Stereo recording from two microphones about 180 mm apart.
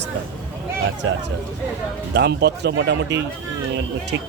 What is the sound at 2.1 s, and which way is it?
Speech, 70° right (ahead or behind).